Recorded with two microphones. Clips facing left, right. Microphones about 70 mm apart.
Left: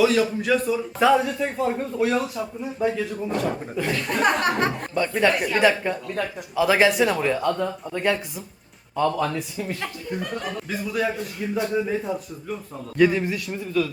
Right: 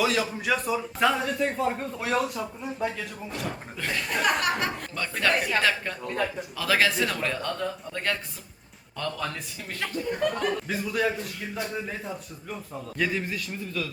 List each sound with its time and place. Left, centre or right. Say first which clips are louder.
0.0 s a man's voice: left 6 dB; centre
4.2 s speech: left 5 dB; left
4.9 s speech: left 7 dB; centre
5.3 s a man's voice: left 2 dB; centre
5.5 s a man's voice: left 6 dB; centre